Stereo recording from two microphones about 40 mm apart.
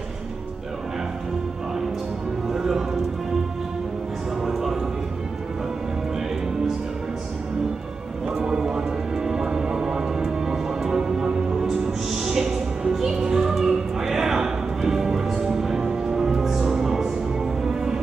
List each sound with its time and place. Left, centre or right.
2.5 s music: centre
4.5 s music: centre
8.4 s music: centre
11.0 s music: right
11.6 s music: centre